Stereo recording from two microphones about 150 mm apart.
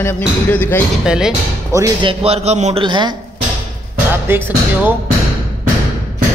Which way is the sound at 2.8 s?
30° right (ahead or behind).